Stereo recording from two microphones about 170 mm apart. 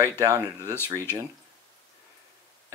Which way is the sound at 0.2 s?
20° right (ahead or behind).